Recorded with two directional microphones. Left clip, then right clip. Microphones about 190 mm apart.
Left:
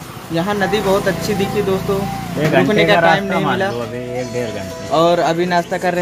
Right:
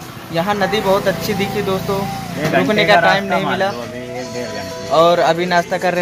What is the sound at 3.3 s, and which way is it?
Speech, 50° left (ahead or behind).